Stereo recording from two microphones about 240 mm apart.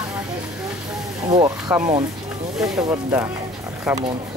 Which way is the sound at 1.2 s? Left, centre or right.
Centre.